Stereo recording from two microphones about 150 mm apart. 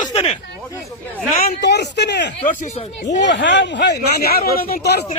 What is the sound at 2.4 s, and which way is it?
Speech, 50° left (ahead or behind).